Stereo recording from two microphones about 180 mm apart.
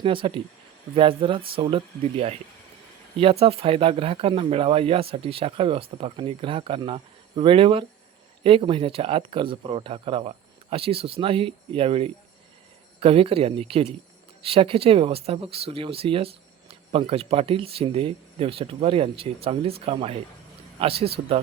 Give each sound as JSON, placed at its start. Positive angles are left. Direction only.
{"t": 0.0, "sound": "speech", "side_deg": -30}
{"t": 3.4, "sound": "speech", "side_deg": -30}